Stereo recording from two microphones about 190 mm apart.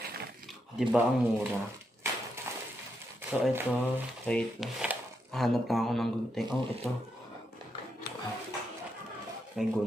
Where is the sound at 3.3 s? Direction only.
10° right (ahead or behind).